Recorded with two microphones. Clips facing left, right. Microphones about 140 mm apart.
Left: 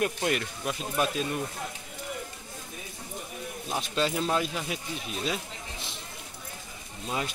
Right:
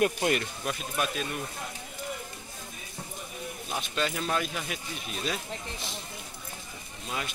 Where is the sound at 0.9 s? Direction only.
30° left (ahead or behind).